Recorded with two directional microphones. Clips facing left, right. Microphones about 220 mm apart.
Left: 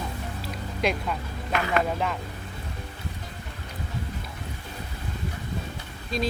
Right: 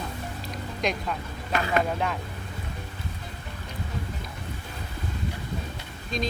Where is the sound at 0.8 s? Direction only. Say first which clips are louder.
Left 2 dB; 5° left (ahead or behind).